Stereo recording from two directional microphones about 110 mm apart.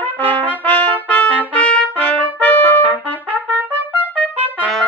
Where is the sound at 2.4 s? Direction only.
15° left (ahead or behind).